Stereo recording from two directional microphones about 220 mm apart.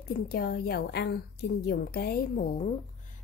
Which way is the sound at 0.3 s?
45° left (ahead or behind).